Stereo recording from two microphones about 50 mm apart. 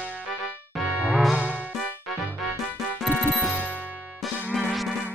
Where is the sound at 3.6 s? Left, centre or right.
Right.